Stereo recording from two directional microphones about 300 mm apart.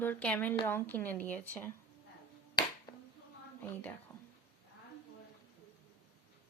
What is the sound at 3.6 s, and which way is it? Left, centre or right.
Speech, centre.